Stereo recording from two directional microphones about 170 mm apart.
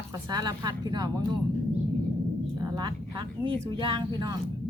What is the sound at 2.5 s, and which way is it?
Speech, 25° right (ahead or behind).